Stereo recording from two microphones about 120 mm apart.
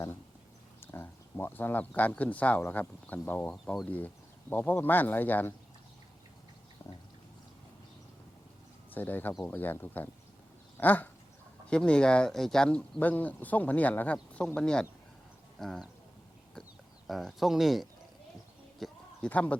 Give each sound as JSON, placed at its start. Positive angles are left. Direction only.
{"t": 0.8, "sound": "speech", "side_deg": 20}
{"t": 3.5, "sound": "speech", "side_deg": 0}
{"t": 3.9, "sound": "speech", "side_deg": 15}
{"t": 8.9, "sound": "speech", "side_deg": 15}
{"t": 10.8, "sound": "a sound", "side_deg": 15}
{"t": 11.7, "sound": "speech", "side_deg": 10}
{"t": 17.1, "sound": "speech", "side_deg": 0}
{"t": 18.8, "sound": "a sound", "side_deg": 10}